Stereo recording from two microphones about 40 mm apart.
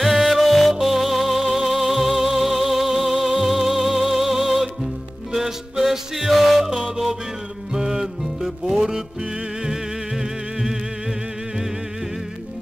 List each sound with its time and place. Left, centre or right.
0.0 s music: centre
7.7 s music: centre